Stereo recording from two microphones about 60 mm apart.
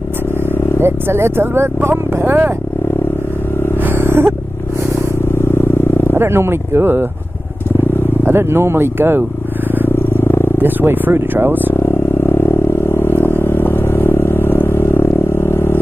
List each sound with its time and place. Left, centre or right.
0.7 s speech: right
3.8 s a sound: right
6.1 s speech: right
8.3 s speech: right
9.9 s purr: left
10.6 s speech: right
12.3 s vehicle: left